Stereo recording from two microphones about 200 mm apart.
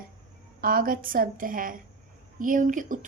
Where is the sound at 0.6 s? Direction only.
45° right (ahead or behind).